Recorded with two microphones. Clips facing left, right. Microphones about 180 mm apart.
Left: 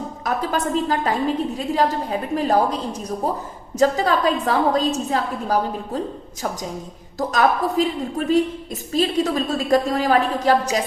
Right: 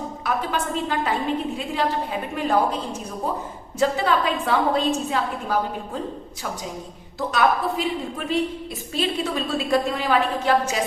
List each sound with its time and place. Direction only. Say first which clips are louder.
0.3 s a woman's voice: left 3 dB; 40° left (ahead or behind)
7.2 s a woman's voice: left 2 dB; 40° left (ahead or behind)